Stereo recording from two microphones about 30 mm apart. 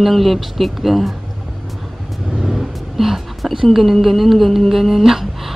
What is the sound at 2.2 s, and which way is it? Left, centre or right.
Vehicle, right.